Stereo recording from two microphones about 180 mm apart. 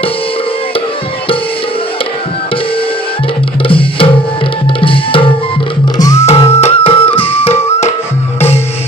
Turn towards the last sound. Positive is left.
turn(degrees=15)  # may be behind; listen again after turning